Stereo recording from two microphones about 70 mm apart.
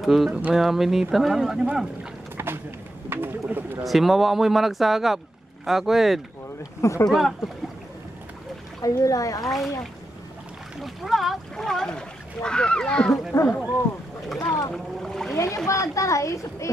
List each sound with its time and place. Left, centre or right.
0.0 s speech: centre
0.3 s speech: centre
0.6 s speech: centre
2.3 s a sound: right
3.1 s speech: right
3.8 s speech: centre
6.8 s speech: left
7.1 s speech: centre
8.8 s speech: left
9.4 s speech: centre
10.8 s speech: centre
13.3 s speech: left
14.7 s speech: centre
15.3 s speech: left